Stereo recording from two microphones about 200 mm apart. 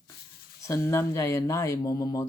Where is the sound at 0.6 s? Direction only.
15° left (ahead or behind).